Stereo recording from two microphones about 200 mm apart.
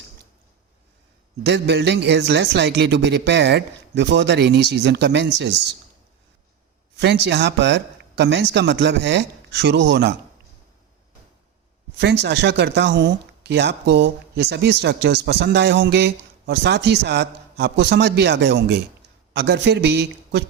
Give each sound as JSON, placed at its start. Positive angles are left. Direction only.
{"t": 1.5, "sound": "speech", "side_deg": -55}
{"t": 7.0, "sound": "speech", "side_deg": -55}
{"t": 11.9, "sound": "speech", "side_deg": -60}